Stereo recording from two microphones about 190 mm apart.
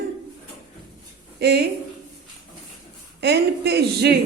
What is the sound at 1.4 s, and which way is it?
Speech, 60° right (ahead or behind).